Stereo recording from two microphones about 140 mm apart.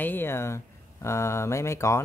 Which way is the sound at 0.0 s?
15° left (ahead or behind).